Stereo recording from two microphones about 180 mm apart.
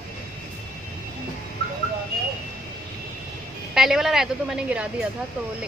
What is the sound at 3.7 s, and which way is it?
A woman's voice, centre (ahead or behind).